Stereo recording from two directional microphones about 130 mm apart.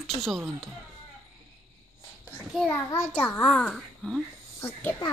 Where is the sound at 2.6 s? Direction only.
15° left (ahead or behind); by 4.2 s centre (ahead or behind).